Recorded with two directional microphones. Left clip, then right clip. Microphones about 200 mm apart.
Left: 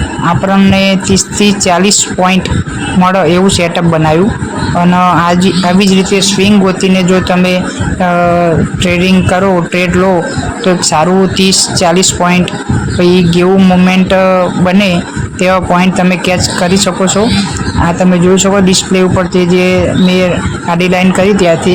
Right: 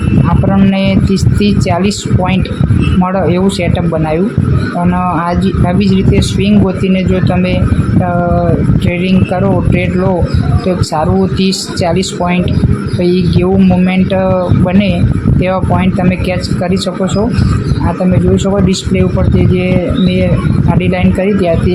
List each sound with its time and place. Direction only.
0.5 s a man's voice: 20° left (ahead or behind)
8.9 s a man's voice: 20° left (ahead or behind)
10.9 s a man's voice: 15° left (ahead or behind)
18.3 s speech: 15° left (ahead or behind)
20.7 s a man's voice: 20° left (ahead or behind)